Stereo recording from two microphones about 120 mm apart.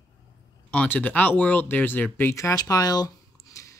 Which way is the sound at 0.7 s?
10° left (ahead or behind).